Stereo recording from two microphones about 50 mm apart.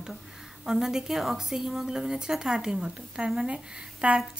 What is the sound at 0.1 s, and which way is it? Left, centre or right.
A woman's voice, centre.